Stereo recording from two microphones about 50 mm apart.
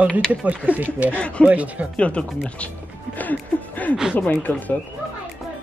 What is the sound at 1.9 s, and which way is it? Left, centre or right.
Speech, left.